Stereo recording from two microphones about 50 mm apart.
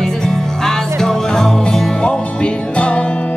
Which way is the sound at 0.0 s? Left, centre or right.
Centre.